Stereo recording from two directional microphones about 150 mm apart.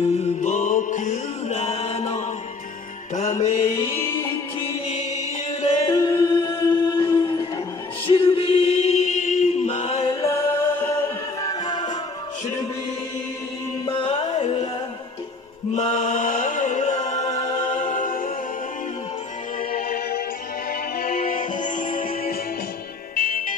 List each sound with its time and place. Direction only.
0.0 s mantra: 50° left (ahead or behind)
3.2 s music: 55° left (ahead or behind)
3.7 s music: 20° left (ahead or behind)
5.9 s a capella: 30° left (ahead or behind)
7.2 s music: 30° left (ahead or behind)
8.1 s chant: 35° left (ahead or behind)
10.2 s music: 20° left (ahead or behind)
13.8 s music: 35° left (ahead or behind)
15.7 s mantra: 50° left (ahead or behind)
17.6 s music: 55° left (ahead or behind)
19.7 s music: 85° left
21.0 s music: 75° left (ahead or behind)